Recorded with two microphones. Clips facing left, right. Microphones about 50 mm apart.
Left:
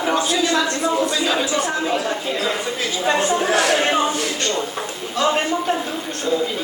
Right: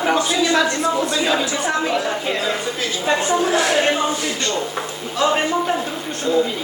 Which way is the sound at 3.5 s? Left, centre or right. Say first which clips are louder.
Even; left.